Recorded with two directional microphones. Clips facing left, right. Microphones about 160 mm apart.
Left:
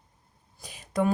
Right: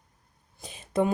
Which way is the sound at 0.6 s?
25° right (ahead or behind).